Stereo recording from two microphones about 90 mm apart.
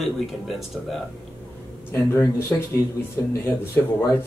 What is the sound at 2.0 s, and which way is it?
Speech, 35° left (ahead or behind).